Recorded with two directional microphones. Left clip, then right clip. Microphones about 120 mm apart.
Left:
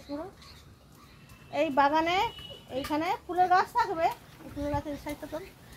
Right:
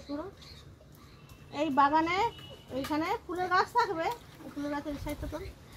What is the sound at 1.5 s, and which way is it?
A woman's voice, 40° left (ahead or behind).